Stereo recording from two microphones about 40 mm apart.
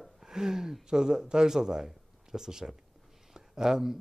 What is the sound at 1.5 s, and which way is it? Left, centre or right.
Speech, centre.